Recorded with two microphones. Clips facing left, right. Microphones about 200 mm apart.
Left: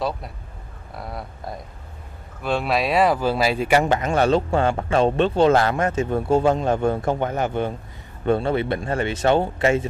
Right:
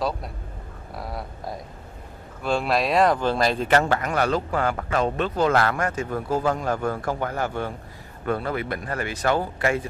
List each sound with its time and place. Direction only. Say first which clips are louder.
0.9 s speech: even; centre (ahead or behind); by 9.8 s 25° left (ahead or behind)